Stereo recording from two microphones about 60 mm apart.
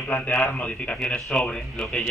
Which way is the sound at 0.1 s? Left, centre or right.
Left.